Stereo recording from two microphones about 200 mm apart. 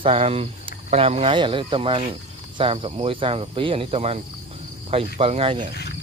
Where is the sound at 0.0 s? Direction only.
30° right (ahead or behind).